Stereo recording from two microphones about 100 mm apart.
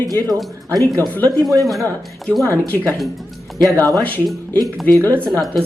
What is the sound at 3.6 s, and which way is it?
Speech, 35° right (ahead or behind).